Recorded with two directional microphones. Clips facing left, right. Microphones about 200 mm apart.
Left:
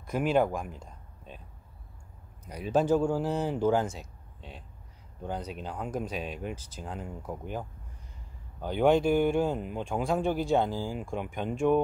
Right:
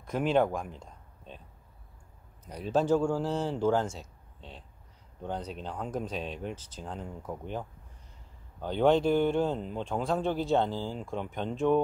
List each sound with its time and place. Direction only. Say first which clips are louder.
0.0 s speech: even; 5° left (ahead or behind)
2.4 s speech: left 1 dB; 10° left (ahead or behind)